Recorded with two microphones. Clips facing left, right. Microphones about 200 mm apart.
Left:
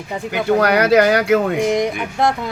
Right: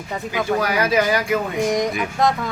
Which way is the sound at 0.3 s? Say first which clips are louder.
Left 6 dB; 70° left (ahead or behind).